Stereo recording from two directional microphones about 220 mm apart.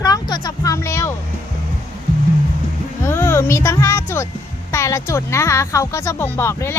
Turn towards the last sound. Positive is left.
turn(degrees=10)  # may be behind; listen again after turning